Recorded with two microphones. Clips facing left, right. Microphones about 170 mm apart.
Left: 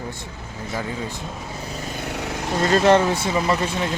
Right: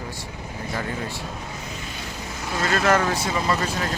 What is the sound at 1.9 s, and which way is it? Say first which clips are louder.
Vehicle: left 6 dB; 65° left (ahead or behind).